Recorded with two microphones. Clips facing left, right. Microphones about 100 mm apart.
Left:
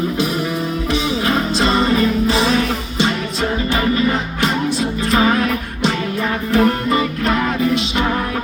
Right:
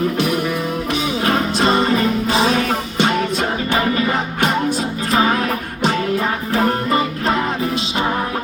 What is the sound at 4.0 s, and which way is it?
Music, 50° right (ahead or behind).